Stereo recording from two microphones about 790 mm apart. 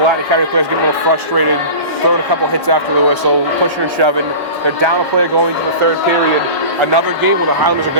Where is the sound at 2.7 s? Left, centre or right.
Right.